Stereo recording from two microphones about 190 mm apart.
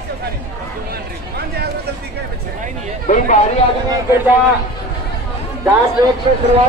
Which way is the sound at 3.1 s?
40° left (ahead or behind).